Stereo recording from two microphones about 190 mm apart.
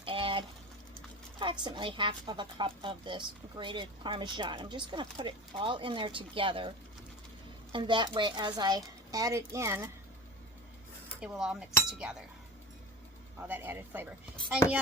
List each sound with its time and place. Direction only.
0.0 s a sound: 30° right (ahead or behind)
1.4 s a woman's voice: 25° right (ahead or behind)
11.2 s speech: 5° right (ahead or behind)
13.5 s speech: 10° right (ahead or behind)